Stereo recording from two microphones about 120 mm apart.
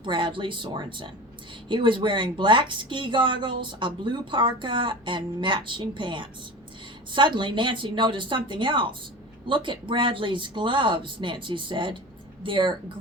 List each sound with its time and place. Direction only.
0.0 s speech: 45° right (ahead or behind)